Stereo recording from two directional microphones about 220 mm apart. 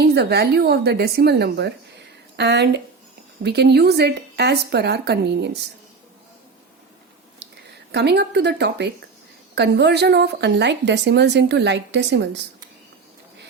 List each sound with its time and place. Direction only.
0.0 s a woman's voice: 45° right (ahead or behind)
7.9 s a woman's voice: 50° right (ahead or behind)